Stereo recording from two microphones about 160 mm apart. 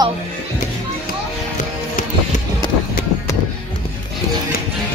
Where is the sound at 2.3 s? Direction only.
50° left (ahead or behind).